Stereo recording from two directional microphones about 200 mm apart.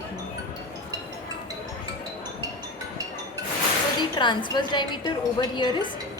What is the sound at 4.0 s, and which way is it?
A woman's voice, 20° left (ahead or behind).